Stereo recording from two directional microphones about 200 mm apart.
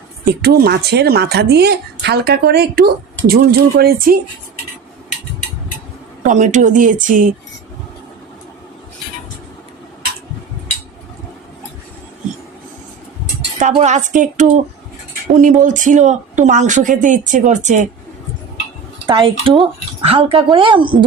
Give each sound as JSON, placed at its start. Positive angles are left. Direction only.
{"t": 0.3, "sound": "speech", "side_deg": -50}
{"t": 6.2, "sound": "a woman's voice", "side_deg": -40}
{"t": 13.6, "sound": "a woman's voice", "side_deg": -35}
{"t": 19.0, "sound": "speech", "side_deg": -25}